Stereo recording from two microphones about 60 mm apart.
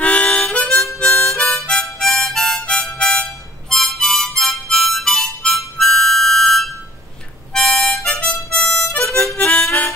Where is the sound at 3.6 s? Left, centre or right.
Centre.